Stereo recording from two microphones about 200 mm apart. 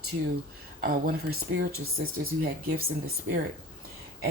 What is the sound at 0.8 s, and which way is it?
Speech, 50° right (ahead or behind).